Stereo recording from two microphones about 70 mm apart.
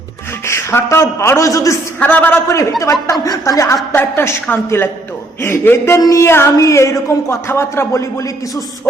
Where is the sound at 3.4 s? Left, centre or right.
Left.